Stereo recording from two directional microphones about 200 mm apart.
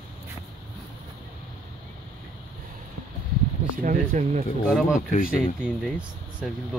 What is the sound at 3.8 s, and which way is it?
Speech, 40° right (ahead or behind).